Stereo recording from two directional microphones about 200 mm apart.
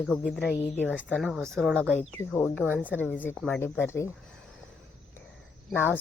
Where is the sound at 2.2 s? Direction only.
15° left (ahead or behind).